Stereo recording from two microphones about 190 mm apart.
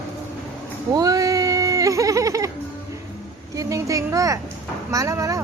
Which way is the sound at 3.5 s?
15° right (ahead or behind).